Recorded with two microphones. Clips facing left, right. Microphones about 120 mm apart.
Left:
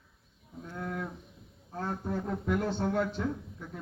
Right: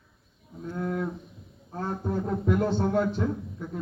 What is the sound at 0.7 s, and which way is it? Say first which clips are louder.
Livestock: right 7 dB; 20° right (ahead or behind).